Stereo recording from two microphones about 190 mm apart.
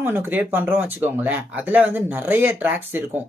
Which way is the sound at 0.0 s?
10° right (ahead or behind).